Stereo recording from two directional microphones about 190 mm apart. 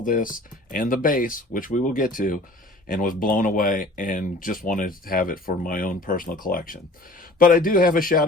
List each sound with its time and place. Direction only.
0.0 s speech: 45° left (ahead or behind)